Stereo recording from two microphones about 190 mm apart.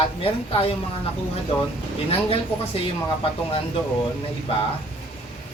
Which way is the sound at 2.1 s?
30° left (ahead or behind).